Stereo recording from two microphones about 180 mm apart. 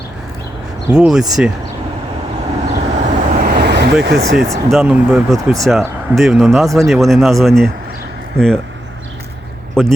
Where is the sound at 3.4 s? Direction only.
65° right (ahead or behind).